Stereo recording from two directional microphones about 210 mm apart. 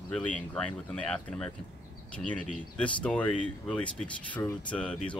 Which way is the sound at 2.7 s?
5° left (ahead or behind).